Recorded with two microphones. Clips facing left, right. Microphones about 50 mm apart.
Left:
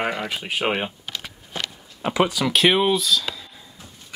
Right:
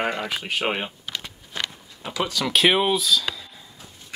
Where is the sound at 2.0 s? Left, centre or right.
Left.